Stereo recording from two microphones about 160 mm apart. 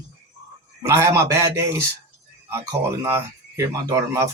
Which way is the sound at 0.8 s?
15° right (ahead or behind).